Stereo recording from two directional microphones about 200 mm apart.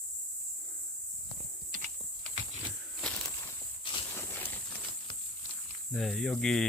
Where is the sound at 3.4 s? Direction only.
25° left (ahead or behind).